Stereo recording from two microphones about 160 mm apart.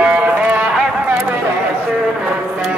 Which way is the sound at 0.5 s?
10° right (ahead or behind).